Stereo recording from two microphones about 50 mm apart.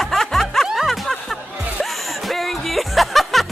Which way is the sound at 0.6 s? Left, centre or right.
Centre.